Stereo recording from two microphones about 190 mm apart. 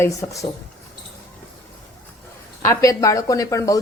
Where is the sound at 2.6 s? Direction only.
15° left (ahead or behind).